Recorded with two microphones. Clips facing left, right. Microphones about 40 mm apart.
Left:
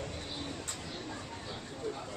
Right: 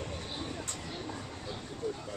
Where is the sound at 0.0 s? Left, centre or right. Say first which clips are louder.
Right 1 dB; right.